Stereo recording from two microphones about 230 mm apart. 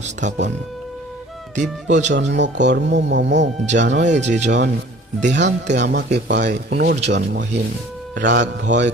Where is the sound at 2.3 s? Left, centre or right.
Right.